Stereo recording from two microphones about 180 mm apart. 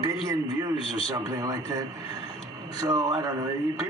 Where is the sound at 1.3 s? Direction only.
20° right (ahead or behind).